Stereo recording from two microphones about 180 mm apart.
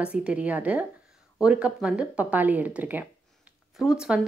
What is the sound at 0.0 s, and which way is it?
Speech, 5° right (ahead or behind).